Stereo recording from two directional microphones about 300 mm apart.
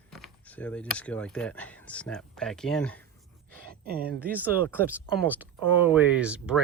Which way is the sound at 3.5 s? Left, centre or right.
Right.